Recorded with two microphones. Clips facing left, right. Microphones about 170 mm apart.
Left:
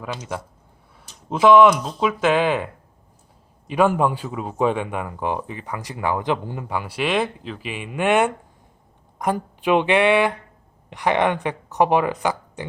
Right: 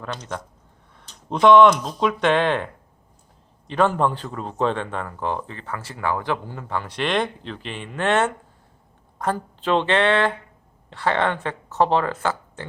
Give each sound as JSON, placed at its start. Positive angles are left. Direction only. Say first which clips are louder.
{"t": 0.0, "sound": "speech", "louder": "left 2 dB", "side_deg": 10}
{"t": 3.7, "sound": "speech", "louder": "left 2 dB", "side_deg": 10}